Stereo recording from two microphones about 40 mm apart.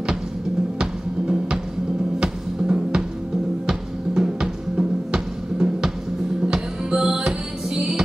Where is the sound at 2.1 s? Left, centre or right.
Centre.